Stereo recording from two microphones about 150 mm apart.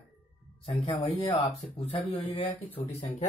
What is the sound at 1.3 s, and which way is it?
Speech, 40° left (ahead or behind).